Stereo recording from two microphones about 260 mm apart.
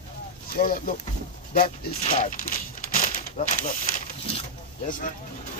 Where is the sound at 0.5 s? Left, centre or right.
Left.